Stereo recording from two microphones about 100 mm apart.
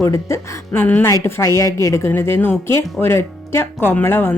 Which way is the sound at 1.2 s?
30° left (ahead or behind).